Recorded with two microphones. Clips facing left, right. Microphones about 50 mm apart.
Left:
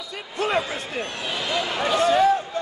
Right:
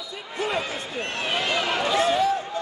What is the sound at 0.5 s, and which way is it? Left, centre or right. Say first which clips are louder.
Speech: left 4 dB; left.